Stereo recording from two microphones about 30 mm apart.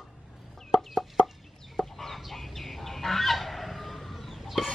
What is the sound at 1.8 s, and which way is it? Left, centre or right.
Chicken, centre.